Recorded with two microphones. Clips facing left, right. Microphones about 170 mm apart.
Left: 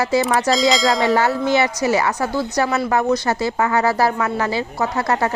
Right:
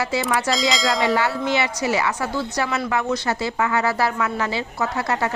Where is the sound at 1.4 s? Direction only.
45° left (ahead or behind).